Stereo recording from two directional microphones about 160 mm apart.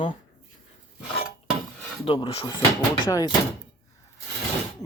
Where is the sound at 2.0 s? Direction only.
30° left (ahead or behind).